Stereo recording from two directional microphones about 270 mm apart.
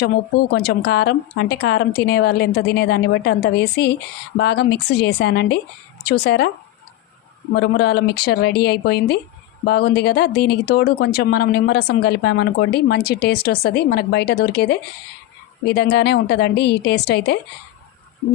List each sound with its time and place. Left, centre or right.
0.0 s speech: left
7.5 s speech: left